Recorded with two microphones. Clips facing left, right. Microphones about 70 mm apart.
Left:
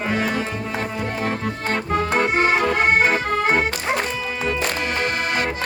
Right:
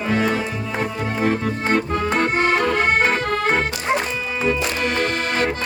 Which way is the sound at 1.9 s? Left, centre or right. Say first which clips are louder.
Even; centre.